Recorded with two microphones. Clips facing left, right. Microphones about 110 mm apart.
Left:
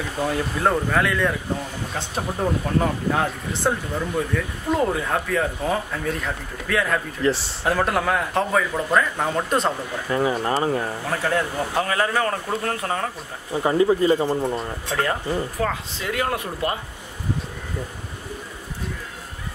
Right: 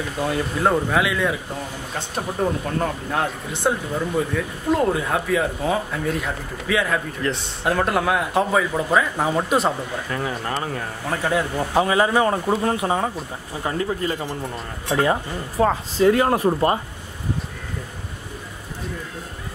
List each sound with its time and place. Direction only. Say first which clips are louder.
0.2 s speech: right 1 dB; centre (ahead or behind)
10.0 s speech: left 8 dB; 15° left (ahead or behind)
11.1 s speech: right 2 dB; 5° right (ahead or behind)
11.8 s speech: right 5 dB; 15° right (ahead or behind)
13.6 s speech: left 6 dB; 15° left (ahead or behind)
14.9 s speech: right 5 dB; 15° right (ahead or behind)
15.6 s speech: right 9 dB; 35° right (ahead or behind)